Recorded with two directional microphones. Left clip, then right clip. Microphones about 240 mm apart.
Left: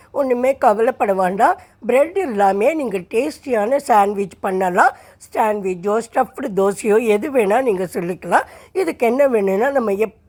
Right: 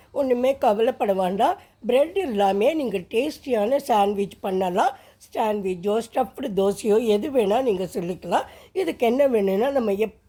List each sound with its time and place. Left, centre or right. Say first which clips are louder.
0.1 s a woman's voice: left 4 dB; centre